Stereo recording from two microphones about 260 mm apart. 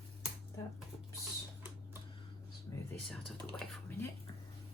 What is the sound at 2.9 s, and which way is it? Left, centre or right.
Speech, centre.